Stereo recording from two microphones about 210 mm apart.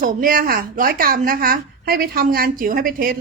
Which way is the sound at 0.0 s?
40° right (ahead or behind).